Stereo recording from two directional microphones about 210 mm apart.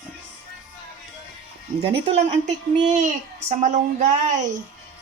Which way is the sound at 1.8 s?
25° right (ahead or behind).